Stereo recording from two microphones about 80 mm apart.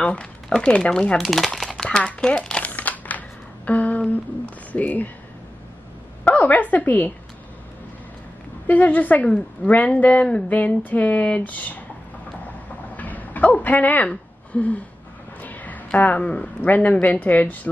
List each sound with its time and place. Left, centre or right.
0.0 s speech: centre
1.8 s a sound: centre
4.7 s a woman's voice: left
6.2 s a woman's voice: left
8.6 s a woman's voice: left
12.9 s a sound: centre
15.4 s speech: left